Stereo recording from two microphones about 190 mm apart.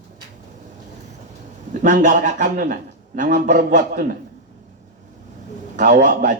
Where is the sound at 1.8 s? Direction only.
45° right (ahead or behind).